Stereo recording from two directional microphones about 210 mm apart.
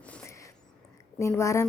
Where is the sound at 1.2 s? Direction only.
15° left (ahead or behind).